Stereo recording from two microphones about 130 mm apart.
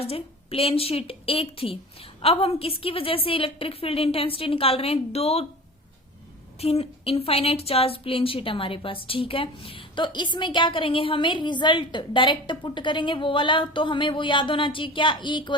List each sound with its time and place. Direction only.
0.0 s a woman's voice: 45° left (ahead or behind)
6.6 s a woman's voice: 50° left (ahead or behind)